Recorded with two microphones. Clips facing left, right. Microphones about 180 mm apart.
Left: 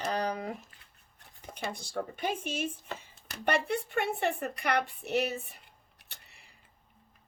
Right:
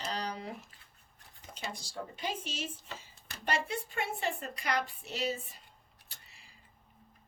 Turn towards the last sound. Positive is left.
turn(degrees=60)  # may be behind; listen again after turning